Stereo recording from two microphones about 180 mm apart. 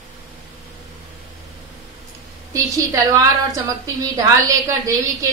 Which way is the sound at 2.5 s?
20° right (ahead or behind).